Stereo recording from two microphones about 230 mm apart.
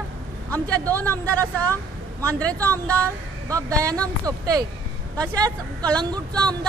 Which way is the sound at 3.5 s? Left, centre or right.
Centre.